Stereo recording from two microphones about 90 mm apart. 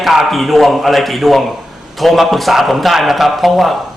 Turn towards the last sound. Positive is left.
turn(degrees=0)  # may be behind; listen again after turning